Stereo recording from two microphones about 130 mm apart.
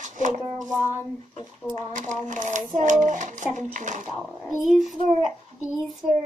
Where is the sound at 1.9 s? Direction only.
75° right (ahead or behind).